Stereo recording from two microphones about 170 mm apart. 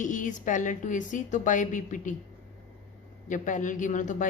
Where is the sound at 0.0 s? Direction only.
50° left (ahead or behind).